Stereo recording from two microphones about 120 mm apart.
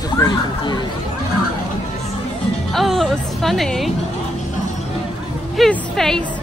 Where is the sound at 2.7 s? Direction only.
Centre (ahead or behind).